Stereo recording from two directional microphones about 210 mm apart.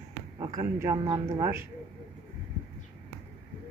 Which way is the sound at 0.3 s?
15° right (ahead or behind).